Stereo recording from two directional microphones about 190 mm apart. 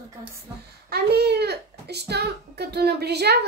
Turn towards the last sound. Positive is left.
turn(degrees=-60)  # may be behind; listen again after turning